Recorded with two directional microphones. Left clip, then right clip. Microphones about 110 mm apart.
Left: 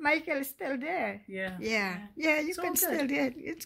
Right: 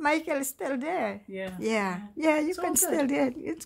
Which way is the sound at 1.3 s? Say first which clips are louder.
Even; 15° left (ahead or behind).